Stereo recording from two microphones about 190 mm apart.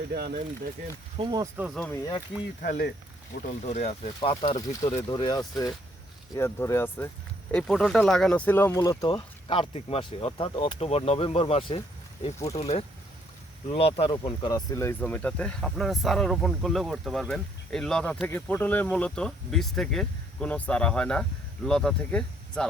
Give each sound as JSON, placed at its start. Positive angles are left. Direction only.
{"t": 0.1, "sound": "speech", "side_deg": -55}
{"t": 1.1, "sound": "speech", "side_deg": -25}
{"t": 1.5, "sound": "speech", "side_deg": -5}
{"t": 1.9, "sound": "speech", "side_deg": 20}
{"t": 2.6, "sound": "speech", "side_deg": 50}
{"t": 3.6, "sound": "speech", "side_deg": 35}
{"t": 4.5, "sound": "speech", "side_deg": 20}